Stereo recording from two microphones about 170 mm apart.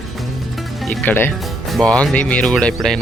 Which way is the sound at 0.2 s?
Centre (ahead or behind).